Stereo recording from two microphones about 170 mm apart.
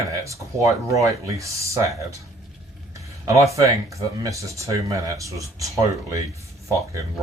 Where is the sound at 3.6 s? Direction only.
20° right (ahead or behind).